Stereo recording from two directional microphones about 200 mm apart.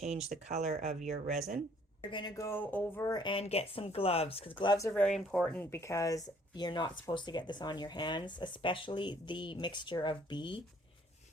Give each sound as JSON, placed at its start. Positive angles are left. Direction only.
{"t": 0.0, "sound": "speech", "side_deg": -35}
{"t": 2.0, "sound": "speech", "side_deg": 20}
{"t": 5.5, "sound": "speech", "side_deg": 15}